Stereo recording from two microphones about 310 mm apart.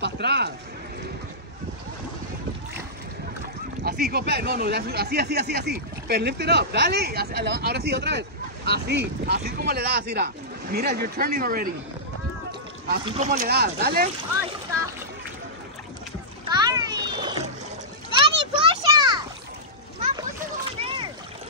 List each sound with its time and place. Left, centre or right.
0.0 s a sound: right
3.8 s speech: right
12.4 s rowboat: right
13.0 s speech: right
16.4 s splash: centre
18.2 s children playing: centre
20.8 s splash: centre